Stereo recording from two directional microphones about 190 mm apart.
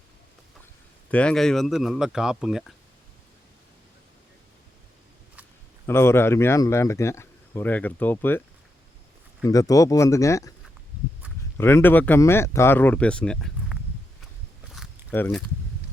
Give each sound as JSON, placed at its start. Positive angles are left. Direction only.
{"t": 1.1, "sound": "speech", "side_deg": 5}
{"t": 5.8, "sound": "speech", "side_deg": 15}
{"t": 9.4, "sound": "speech", "side_deg": 20}
{"t": 11.5, "sound": "speech", "side_deg": 15}
{"t": 14.8, "sound": "a sound", "side_deg": 0}
{"t": 15.1, "sound": "speech", "side_deg": 10}